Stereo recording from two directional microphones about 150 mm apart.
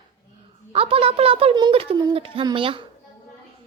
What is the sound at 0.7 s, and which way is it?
A woman's voice, 40° right (ahead or behind).